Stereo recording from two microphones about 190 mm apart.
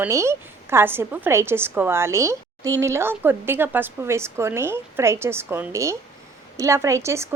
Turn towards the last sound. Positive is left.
turn(degrees=-15)  # may be behind; listen again after turning